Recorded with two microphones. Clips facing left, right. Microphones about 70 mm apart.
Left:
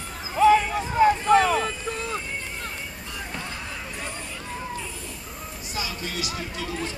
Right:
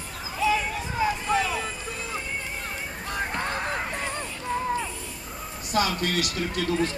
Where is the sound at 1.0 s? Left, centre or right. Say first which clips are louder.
Left 7 dB; left.